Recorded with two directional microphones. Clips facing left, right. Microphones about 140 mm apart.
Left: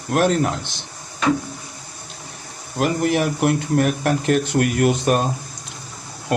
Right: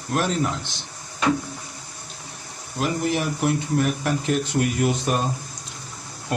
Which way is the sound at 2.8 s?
65° left (ahead or behind).